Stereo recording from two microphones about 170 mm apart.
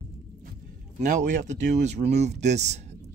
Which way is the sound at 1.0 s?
45° right (ahead or behind).